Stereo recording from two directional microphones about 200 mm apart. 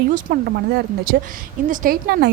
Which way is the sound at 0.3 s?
50° right (ahead or behind).